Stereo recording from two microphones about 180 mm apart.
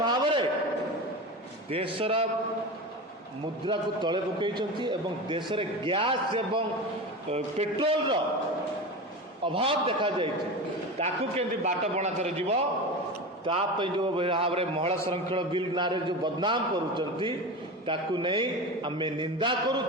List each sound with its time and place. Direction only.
0.0 s a sound: 25° right (ahead or behind)
1.7 s a man's voice: 30° right (ahead or behind)
3.7 s a man's voice: 25° right (ahead or behind)
9.5 s a man's voice: 30° right (ahead or behind)